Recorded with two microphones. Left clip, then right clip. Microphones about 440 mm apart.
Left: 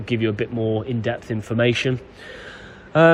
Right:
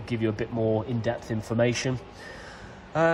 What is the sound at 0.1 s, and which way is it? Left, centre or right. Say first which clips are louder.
Speech: left 6 dB; right.